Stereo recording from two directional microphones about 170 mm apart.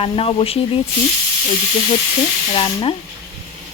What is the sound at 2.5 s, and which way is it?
Speech, 30° left (ahead or behind).